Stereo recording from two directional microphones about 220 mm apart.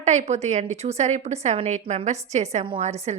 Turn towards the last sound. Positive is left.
turn(degrees=-30)  # may be behind; listen again after turning